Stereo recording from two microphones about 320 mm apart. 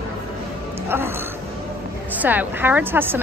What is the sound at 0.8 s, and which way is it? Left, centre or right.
Music, centre.